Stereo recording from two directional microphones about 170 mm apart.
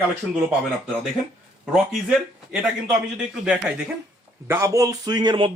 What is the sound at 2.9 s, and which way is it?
Speech, 5° right (ahead or behind).